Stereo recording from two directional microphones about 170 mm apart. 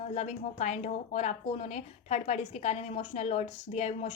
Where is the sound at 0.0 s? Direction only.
40° left (ahead or behind).